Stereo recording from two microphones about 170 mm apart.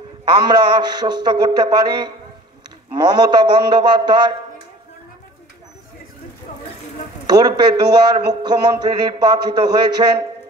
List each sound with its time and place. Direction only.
0.5 s speech: 25° right (ahead or behind)
7.2 s speech: 25° right (ahead or behind)